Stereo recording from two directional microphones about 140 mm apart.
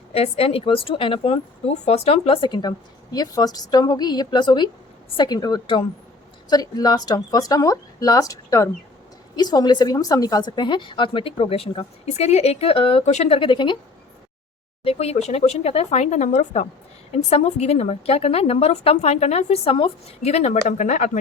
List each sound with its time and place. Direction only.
0.1 s a woman's voice: 45° left (ahead or behind)
14.8 s a woman's voice: 50° left (ahead or behind)